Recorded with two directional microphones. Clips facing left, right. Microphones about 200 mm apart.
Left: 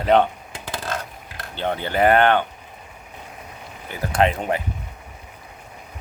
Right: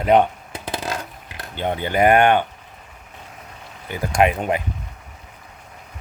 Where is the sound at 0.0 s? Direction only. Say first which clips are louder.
Right 1 dB; 10° right (ahead or behind).